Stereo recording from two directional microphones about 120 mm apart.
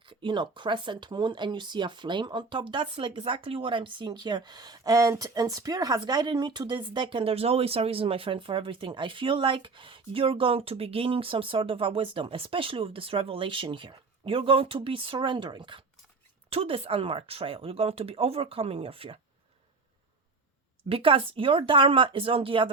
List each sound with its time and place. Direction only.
0.0 s speech: 45° right (ahead or behind)
16.5 s speech: 55° right (ahead or behind)
20.9 s speech: 50° right (ahead or behind)